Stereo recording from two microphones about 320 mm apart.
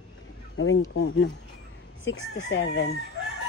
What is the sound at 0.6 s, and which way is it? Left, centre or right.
Speech, left.